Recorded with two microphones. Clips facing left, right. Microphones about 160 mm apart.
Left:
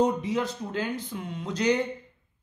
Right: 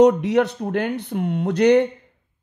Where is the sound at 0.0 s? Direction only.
75° right (ahead or behind).